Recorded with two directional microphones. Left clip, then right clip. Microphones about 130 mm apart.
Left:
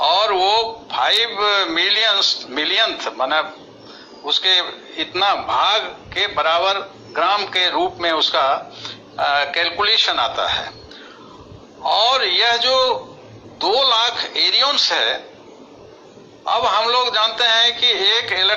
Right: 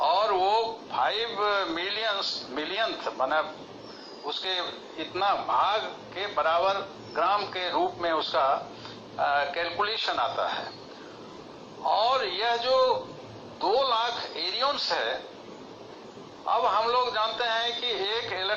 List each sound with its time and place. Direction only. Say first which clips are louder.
0.0 s a sound: left 8 dB; 30° left (ahead or behind)
4.3 s a man's voice: left 14 dB; 30° left (ahead or behind)
11.8 s a man's voice: left 8 dB; 30° left (ahead or behind)
16.5 s a man's voice: left 8 dB; 30° left (ahead or behind)